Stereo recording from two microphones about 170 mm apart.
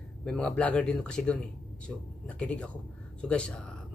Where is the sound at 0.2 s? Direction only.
5° left (ahead or behind).